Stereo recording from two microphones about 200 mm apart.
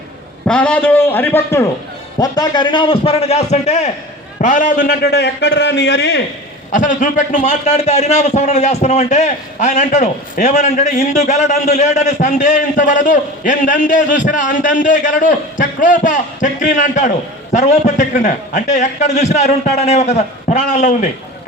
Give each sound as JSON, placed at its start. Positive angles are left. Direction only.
{"t": 0.4, "sound": "a man's voice", "side_deg": 5}
{"t": 6.7, "sound": "a man's voice", "side_deg": 40}